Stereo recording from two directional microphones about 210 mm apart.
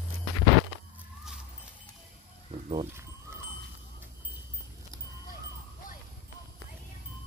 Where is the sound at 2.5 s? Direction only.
30° right (ahead or behind).